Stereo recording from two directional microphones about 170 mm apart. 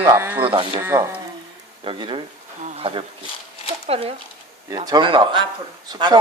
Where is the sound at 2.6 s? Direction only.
35° right (ahead or behind).